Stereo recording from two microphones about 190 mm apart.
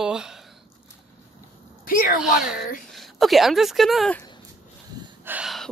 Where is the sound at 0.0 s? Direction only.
5° right (ahead or behind).